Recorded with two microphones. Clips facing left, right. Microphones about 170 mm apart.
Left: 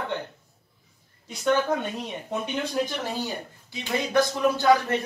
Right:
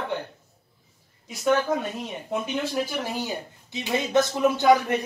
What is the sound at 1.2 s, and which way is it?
A man's voice, 5° right (ahead or behind).